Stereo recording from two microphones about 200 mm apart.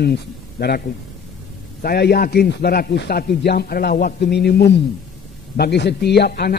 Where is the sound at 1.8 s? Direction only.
50° left (ahead or behind).